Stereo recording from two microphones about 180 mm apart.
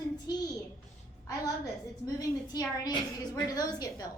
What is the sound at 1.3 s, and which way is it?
A woman's voice, 20° left (ahead or behind).